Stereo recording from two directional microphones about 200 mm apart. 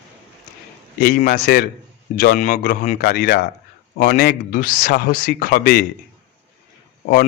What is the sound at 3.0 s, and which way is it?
Speech, 55° left (ahead or behind).